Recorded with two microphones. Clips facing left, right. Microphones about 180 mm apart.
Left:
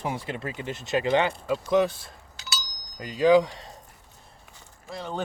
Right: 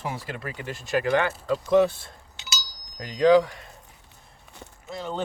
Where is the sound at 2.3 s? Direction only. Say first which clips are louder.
Left 1 dB; 20° right (ahead or behind).